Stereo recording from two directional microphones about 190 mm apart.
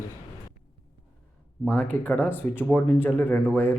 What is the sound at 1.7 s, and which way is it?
Speech, 10° left (ahead or behind).